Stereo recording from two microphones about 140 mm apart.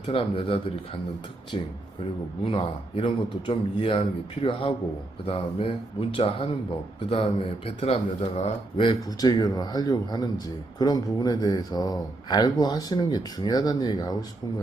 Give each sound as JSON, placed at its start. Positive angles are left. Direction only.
{"t": 0.0, "sound": "speech", "side_deg": 40}
{"t": 5.2, "sound": "speech", "side_deg": 40}